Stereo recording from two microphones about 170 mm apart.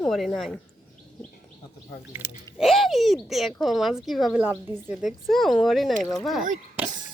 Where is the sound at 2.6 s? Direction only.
Centre (ahead or behind).